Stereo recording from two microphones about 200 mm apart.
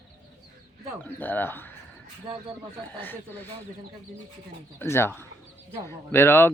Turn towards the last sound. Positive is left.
turn(degrees=10)  # may be behind; listen again after turning